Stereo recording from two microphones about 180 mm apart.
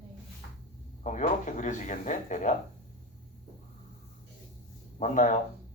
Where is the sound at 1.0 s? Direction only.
45° left (ahead or behind).